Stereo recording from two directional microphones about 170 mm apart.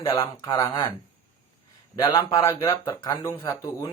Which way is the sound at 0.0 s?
30° left (ahead or behind).